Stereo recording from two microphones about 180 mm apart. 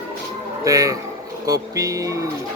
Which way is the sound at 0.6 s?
20° right (ahead or behind).